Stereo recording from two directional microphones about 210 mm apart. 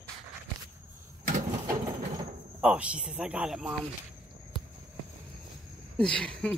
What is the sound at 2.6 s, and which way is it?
Speech, 5° right (ahead or behind).